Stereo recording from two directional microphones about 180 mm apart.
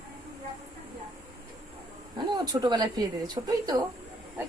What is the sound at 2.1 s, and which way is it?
Speech, 20° right (ahead or behind).